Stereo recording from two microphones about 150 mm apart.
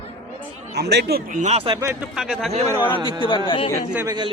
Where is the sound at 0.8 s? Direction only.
90° right.